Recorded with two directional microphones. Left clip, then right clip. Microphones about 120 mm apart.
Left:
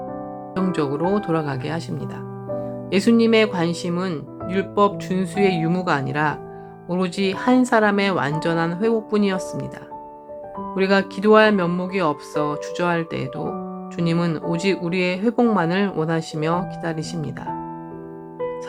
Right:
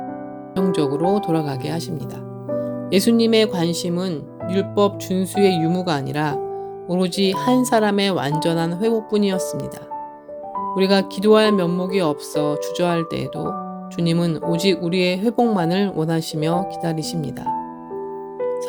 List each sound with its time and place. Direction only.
0.5 s speech: 45° right (ahead or behind)
2.9 s speech: 45° right (ahead or behind)
10.8 s speech: 50° right (ahead or behind)